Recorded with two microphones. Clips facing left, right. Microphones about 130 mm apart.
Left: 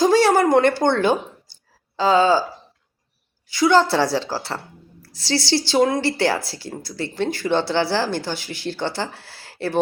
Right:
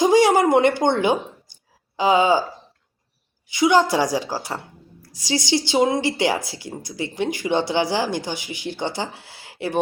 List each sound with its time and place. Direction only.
0.0 s a woman's voice: 15° right (ahead or behind)
3.5 s a woman's voice: 15° right (ahead or behind)